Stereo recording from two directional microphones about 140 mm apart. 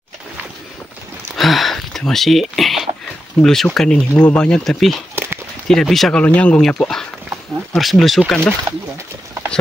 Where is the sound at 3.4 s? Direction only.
5° left (ahead or behind).